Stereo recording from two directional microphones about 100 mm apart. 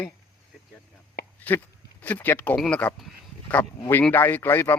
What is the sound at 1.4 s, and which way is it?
A man's voice, 15° left (ahead or behind).